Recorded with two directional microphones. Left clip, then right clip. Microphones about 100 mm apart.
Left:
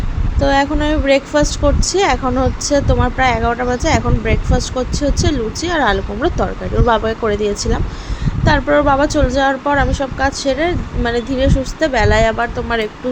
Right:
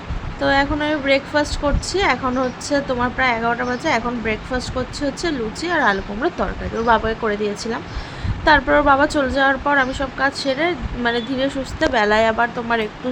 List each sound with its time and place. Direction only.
0.3 s speech: 20° left (ahead or behind)
8.4 s speech: 15° left (ahead or behind)